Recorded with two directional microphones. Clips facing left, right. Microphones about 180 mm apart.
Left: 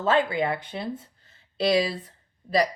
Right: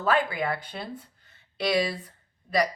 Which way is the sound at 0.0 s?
25° left (ahead or behind).